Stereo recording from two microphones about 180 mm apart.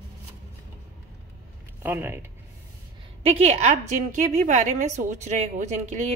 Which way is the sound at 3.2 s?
35° right (ahead or behind).